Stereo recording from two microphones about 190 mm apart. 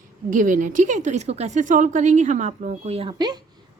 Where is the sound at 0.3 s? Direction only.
45° right (ahead or behind).